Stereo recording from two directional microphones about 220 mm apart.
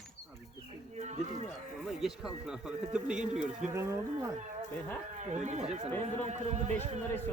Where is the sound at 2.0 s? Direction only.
Centre (ahead or behind).